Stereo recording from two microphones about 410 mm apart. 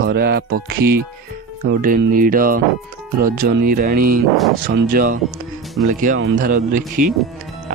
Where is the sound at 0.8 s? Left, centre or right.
Right.